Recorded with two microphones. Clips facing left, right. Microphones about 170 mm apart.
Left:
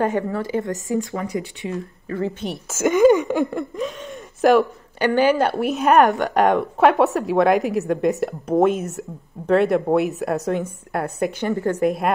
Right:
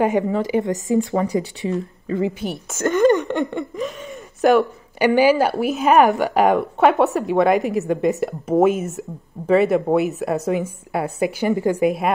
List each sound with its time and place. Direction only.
0.0 s speech: 15° right (ahead or behind)
1.1 s speech: 35° right (ahead or behind)
1.7 s speech: 20° right (ahead or behind)
2.4 s speech: centre (ahead or behind)
4.9 s speech: 10° right (ahead or behind)